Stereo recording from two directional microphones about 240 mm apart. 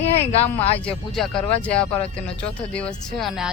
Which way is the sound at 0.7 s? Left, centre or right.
Centre.